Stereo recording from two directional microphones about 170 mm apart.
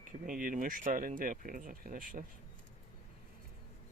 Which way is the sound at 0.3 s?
55° right (ahead or behind).